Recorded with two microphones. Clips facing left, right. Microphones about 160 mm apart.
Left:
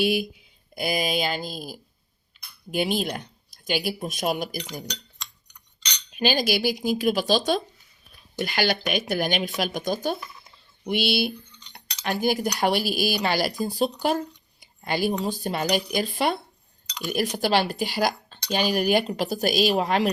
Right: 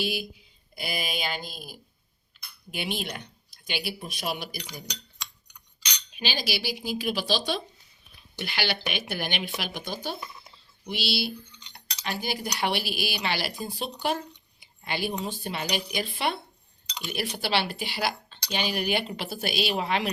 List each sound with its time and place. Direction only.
0.0 s speech: 60° left (ahead or behind)
0.8 s speech: 45° left (ahead or behind)
2.7 s cutlery: 40° left (ahead or behind)
6.1 s cutlery: 50° left (ahead or behind)
14.6 s speech: 40° left (ahead or behind)